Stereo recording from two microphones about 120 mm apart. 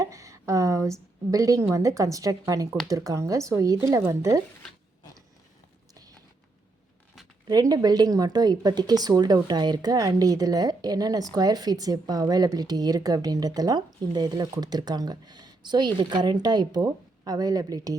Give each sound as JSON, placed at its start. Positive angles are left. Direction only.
{"t": 0.0, "sound": "a woman's voice", "side_deg": -25}
{"t": 7.4, "sound": "speech", "side_deg": -35}